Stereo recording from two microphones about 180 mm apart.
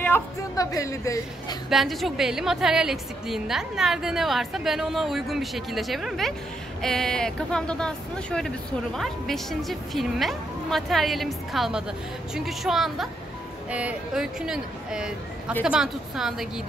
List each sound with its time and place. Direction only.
0.0 s a woman's voice: 15° left (ahead or behind)
1.7 s speech: centre (ahead or behind)